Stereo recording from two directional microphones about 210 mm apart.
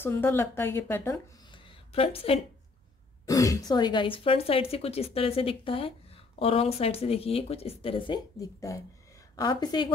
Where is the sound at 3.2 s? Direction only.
15° left (ahead or behind).